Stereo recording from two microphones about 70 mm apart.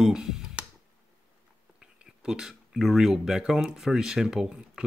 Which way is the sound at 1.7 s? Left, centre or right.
Centre.